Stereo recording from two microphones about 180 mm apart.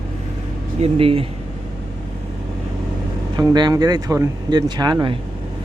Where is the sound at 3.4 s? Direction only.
20° right (ahead or behind).